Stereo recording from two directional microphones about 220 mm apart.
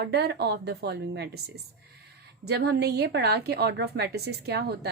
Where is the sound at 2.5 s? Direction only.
50° right (ahead or behind).